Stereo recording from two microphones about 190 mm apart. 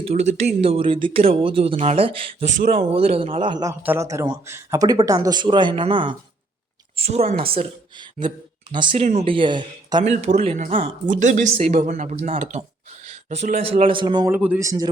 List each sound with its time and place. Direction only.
0.0 s a man's voice: 35° right (ahead or behind)
10.0 s speech: 35° right (ahead or behind)
14.3 s speech: 10° right (ahead or behind)